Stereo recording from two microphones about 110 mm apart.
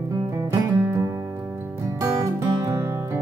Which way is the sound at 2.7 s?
25° right (ahead or behind).